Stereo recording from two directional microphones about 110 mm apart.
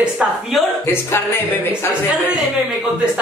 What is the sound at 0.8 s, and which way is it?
Speech, 25° left (ahead or behind).